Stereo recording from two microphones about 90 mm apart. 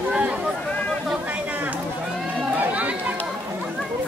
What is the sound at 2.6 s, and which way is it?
Chatter, 15° right (ahead or behind).